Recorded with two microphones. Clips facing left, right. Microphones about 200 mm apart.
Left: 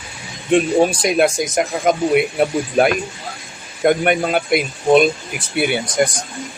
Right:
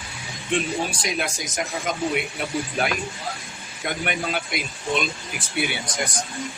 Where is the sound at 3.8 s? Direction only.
55° left (ahead or behind).